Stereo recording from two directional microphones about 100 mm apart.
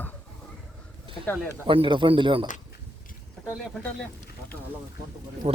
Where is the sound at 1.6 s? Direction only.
60° right (ahead or behind).